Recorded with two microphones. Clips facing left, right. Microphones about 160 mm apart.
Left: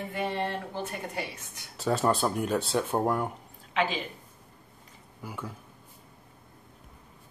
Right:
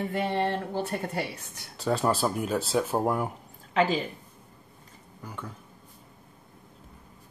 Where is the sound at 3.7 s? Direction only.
40° right (ahead or behind).